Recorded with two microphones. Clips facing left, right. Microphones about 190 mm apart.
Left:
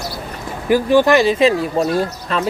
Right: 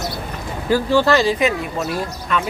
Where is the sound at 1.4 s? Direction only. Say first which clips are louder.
Left 5 dB; 30° left (ahead or behind).